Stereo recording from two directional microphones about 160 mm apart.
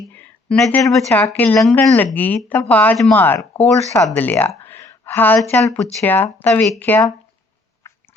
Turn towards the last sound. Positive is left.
turn(degrees=10)  # may be behind; listen again after turning